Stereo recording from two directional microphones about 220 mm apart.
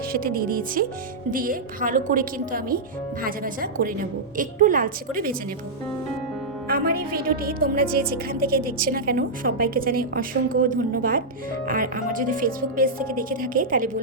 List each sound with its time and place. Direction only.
0.1 s a woman's voice: 40° right (ahead or behind)
6.7 s a woman's voice: 45° right (ahead or behind)